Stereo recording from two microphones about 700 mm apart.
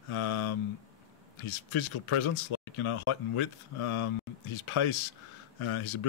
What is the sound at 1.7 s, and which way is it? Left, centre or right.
Speech, left.